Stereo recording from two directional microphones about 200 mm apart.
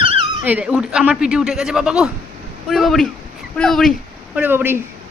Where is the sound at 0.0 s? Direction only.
25° right (ahead or behind).